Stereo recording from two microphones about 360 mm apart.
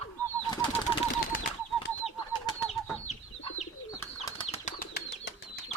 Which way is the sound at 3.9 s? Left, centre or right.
Centre.